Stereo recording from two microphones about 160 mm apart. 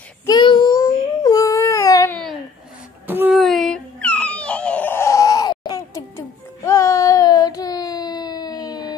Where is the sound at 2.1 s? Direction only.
5° left (ahead or behind).